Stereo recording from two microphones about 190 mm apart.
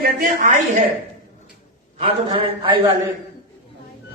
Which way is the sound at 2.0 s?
30° right (ahead or behind).